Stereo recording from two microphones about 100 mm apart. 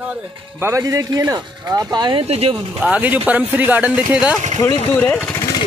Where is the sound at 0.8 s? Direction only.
35° right (ahead or behind).